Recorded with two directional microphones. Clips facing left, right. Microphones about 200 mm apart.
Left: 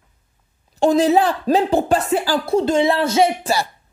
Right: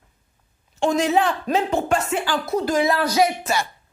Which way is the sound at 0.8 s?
35° left (ahead or behind).